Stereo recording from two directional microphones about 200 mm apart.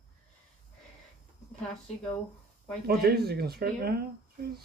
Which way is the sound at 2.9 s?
50° right (ahead or behind).